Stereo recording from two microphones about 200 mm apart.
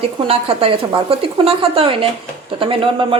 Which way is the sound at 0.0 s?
30° right (ahead or behind).